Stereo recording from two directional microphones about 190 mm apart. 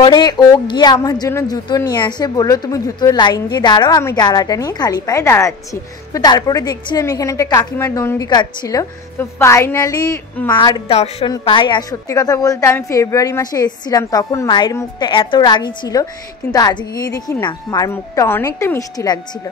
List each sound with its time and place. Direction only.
0.0 s a woman's voice: 20° left (ahead or behind)